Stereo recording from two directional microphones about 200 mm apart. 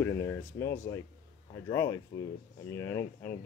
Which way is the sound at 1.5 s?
15° left (ahead or behind).